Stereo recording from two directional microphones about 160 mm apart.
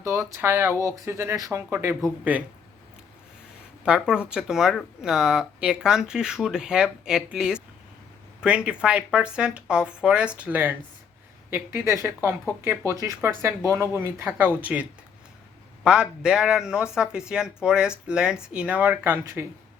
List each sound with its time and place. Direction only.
0.0 s speech: 15° right (ahead or behind)
3.8 s speech: 5° right (ahead or behind)